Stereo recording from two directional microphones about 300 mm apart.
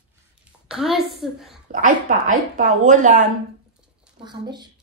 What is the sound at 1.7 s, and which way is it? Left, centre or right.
A woman's voice, right.